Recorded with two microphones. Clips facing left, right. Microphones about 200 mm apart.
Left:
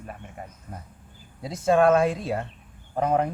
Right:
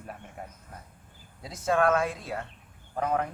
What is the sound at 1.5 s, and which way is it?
A woman's voice, 25° left (ahead or behind).